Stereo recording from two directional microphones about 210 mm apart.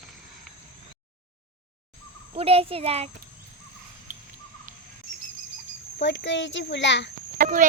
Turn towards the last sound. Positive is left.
turn(degrees=-40)  # may be behind; listen again after turning